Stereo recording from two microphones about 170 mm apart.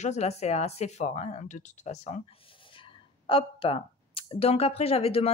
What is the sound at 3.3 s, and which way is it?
Speech, 35° left (ahead or behind).